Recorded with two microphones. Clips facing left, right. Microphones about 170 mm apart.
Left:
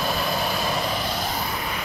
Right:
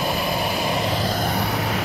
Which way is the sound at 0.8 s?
30° right (ahead or behind).